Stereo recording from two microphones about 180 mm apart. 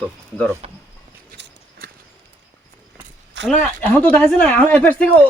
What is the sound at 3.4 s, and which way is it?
Speech, 90° right.